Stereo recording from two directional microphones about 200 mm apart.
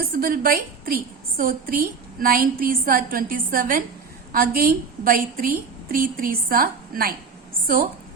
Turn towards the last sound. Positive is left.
turn(degrees=-45)  # may be behind; listen again after turning